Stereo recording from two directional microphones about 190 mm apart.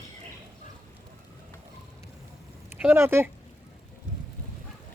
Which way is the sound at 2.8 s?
10° right (ahead or behind).